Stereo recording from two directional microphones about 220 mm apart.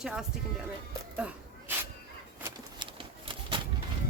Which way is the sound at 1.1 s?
5° right (ahead or behind).